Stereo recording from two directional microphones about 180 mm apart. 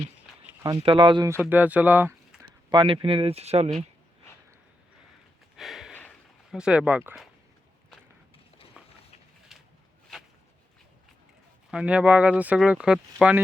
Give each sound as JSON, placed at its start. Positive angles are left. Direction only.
{"t": 0.6, "sound": "speech", "side_deg": -25}
{"t": 1.3, "sound": "speech", "side_deg": -10}
{"t": 2.6, "sound": "speech", "side_deg": -30}
{"t": 5.5, "sound": "a sound", "side_deg": 0}
{"t": 6.5, "sound": "speech", "side_deg": -5}
{"t": 8.8, "sound": "a sound", "side_deg": -5}
{"t": 11.7, "sound": "speech", "side_deg": -5}